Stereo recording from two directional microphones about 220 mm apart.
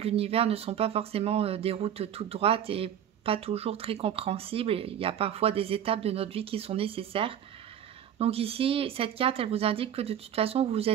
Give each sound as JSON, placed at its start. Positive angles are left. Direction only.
{"t": 0.0, "sound": "speech", "side_deg": -25}